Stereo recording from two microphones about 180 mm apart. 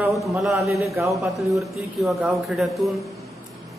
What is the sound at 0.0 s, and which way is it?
A man's voice, centre (ahead or behind).